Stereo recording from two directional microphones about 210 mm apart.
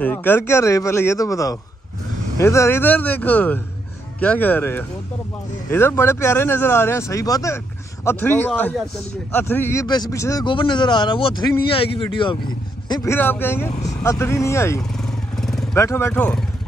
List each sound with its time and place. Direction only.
0.0 s speech: 10° left (ahead or behind)
15.3 s vehicle: centre (ahead or behind)
15.8 s speech: 10° left (ahead or behind)